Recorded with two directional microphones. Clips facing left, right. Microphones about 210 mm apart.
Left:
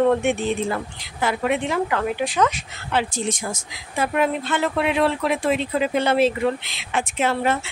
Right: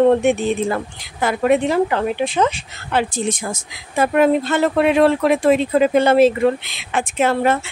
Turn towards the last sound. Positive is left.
turn(degrees=-50)  # may be behind; listen again after turning